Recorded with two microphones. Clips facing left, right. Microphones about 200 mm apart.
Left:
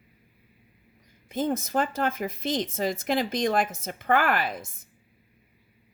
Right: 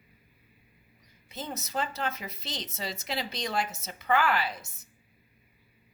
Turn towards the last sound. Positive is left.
turn(degrees=50)  # may be behind; listen again after turning